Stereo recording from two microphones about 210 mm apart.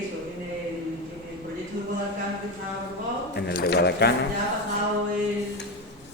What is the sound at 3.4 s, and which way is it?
Speech, 50° left (ahead or behind).